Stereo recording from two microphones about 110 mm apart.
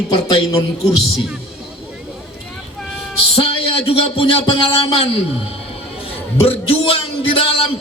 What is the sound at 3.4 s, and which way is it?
A man's voice, 55° left (ahead or behind).